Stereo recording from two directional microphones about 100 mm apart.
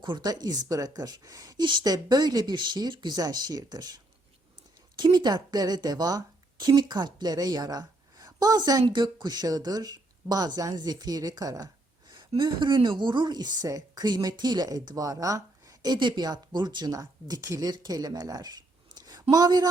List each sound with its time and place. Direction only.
0.0 s a woman's voice: 45° right (ahead or behind)
12.4 s a woman's voice: 50° right (ahead or behind)